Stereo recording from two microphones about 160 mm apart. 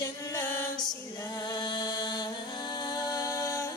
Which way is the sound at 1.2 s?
25° left (ahead or behind).